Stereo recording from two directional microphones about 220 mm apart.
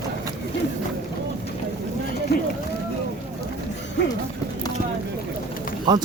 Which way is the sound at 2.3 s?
50° left (ahead or behind).